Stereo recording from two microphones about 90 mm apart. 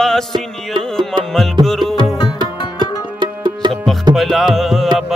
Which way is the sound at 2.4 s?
60° right (ahead or behind).